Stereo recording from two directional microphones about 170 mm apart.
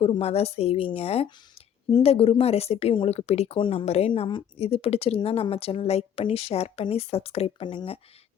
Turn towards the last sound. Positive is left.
turn(degrees=30)  # may be behind; listen again after turning